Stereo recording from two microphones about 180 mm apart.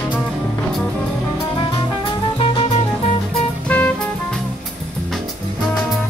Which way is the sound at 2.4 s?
30° left (ahead or behind).